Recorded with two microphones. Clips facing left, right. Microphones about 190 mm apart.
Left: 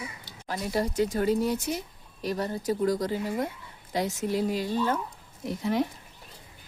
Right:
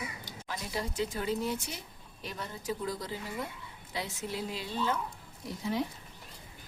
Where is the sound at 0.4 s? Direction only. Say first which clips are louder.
Left 8 dB; 45° left (ahead or behind).